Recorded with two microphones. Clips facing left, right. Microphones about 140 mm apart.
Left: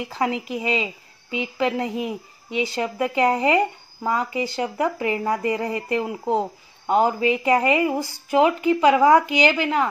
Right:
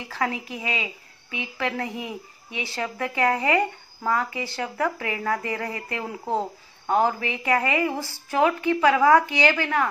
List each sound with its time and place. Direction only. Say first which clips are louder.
0.1 s a woman's voice: left 2 dB; 20° left (ahead or behind)